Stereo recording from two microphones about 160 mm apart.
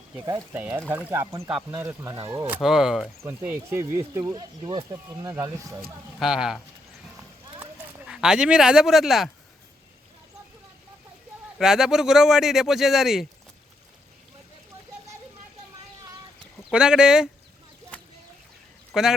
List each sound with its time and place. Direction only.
0.1 s a man's voice: 20° right (ahead or behind)
3.2 s speech: 15° right (ahead or behind)
6.1 s a man's voice: 5° right (ahead or behind)
7.6 s speech: 5° right (ahead or behind)
11.5 s a man's voice: 5° right (ahead or behind)
16.7 s a man's voice: 5° right (ahead or behind)
18.9 s a man's voice: 5° right (ahead or behind)